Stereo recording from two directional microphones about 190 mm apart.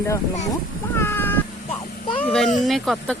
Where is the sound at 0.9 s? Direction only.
10° left (ahead or behind).